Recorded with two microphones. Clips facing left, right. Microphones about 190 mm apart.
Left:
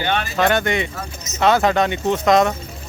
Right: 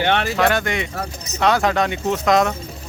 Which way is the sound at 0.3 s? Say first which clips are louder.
Left 1 dB; centre (ahead or behind).